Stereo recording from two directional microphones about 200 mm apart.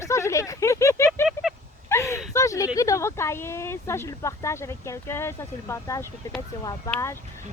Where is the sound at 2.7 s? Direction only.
15° left (ahead or behind).